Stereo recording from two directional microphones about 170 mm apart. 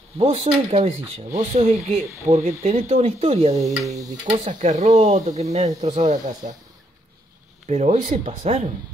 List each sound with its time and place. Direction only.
0.2 s speech: 35° right (ahead or behind)
7.6 s speech: 40° right (ahead or behind)